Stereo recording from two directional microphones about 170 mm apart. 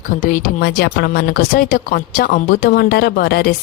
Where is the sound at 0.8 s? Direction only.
70° left (ahead or behind).